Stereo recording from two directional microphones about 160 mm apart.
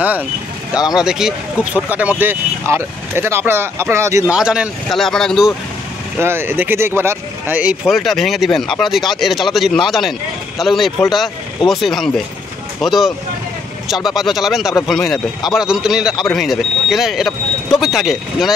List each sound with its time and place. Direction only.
0.7 s speech: 5° right (ahead or behind)
4.3 s speech: 5° right (ahead or behind)
6.1 s speech: 15° right (ahead or behind)